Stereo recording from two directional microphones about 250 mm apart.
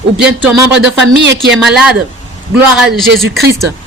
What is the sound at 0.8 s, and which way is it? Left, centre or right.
Speech, right.